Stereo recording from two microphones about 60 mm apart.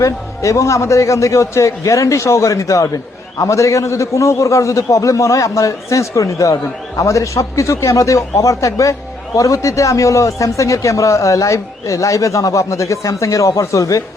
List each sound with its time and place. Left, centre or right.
0.0 s a man's voice: left